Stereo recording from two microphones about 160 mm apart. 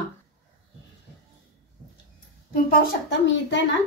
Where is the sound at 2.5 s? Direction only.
70° left (ahead or behind); by 3.6 s 90° left.